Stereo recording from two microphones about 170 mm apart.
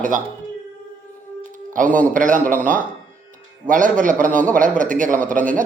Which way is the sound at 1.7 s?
50° right (ahead or behind).